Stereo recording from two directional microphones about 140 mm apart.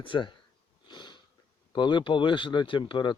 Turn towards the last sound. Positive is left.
turn(degrees=35)  # may be behind; listen again after turning